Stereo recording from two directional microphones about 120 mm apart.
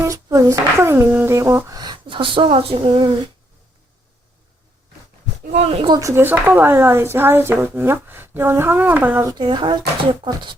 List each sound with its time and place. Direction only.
0.0 s speech: 25° right (ahead or behind)
5.5 s speech: 65° right (ahead or behind)
6.0 s speech: 25° right (ahead or behind)
9.4 s speech: 45° right (ahead or behind)